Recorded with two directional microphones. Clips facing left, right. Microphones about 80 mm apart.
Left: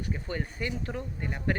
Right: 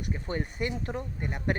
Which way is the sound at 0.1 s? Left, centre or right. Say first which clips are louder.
Right 3 dB; right.